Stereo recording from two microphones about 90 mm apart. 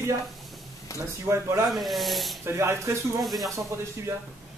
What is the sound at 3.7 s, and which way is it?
Speech, 30° right (ahead or behind).